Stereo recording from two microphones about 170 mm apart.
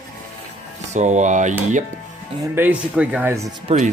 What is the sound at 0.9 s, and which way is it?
Speech, 45° right (ahead or behind).